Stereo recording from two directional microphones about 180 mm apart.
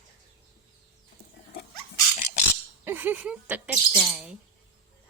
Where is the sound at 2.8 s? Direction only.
10° right (ahead or behind).